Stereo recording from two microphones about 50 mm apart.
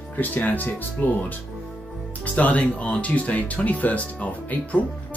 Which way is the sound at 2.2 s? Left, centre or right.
Left.